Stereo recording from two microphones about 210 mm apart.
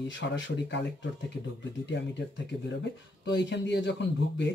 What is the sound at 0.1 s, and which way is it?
Speech, 60° left (ahead or behind).